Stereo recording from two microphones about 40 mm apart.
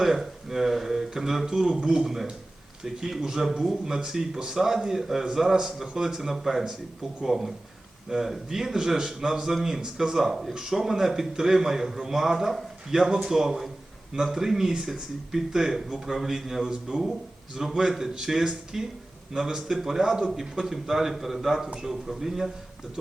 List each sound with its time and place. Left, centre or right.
0.0 s a man's voice: centre